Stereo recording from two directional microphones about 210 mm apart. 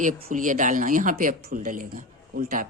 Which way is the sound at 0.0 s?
40° right (ahead or behind).